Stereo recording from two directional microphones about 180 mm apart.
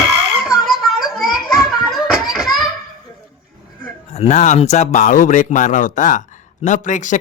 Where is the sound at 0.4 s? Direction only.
5° right (ahead or behind).